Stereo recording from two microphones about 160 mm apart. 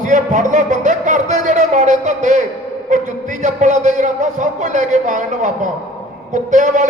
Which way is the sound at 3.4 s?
50° right (ahead or behind).